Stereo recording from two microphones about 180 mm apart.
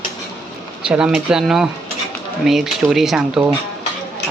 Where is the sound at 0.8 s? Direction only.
5° right (ahead or behind).